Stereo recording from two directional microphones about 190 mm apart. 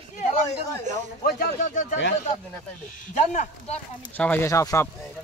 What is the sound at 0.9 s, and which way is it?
Speech, 40° right (ahead or behind).